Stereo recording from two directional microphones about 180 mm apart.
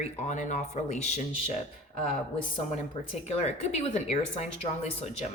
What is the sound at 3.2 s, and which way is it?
Speech, 40° left (ahead or behind).